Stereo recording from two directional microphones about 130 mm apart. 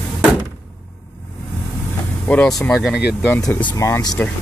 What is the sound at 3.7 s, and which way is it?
Speech, 25° left (ahead or behind).